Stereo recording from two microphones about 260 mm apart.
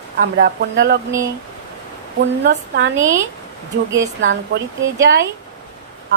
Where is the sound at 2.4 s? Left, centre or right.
Right.